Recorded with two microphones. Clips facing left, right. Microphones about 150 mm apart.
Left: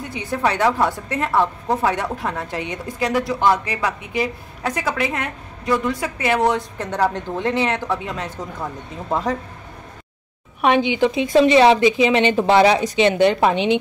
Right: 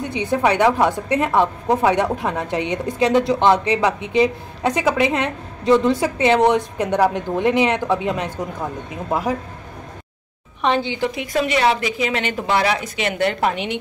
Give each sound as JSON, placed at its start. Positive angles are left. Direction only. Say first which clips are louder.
{"t": 0.1, "sound": "a woman's voice", "louder": "right 3 dB", "side_deg": -20}
{"t": 10.6, "sound": "a woman's voice", "louder": "left 3 dB", "side_deg": 15}